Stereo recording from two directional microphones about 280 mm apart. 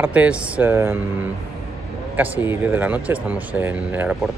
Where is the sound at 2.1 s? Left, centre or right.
Centre.